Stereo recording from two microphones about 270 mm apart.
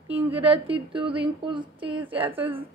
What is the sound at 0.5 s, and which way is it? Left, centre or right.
A woman's voice, centre.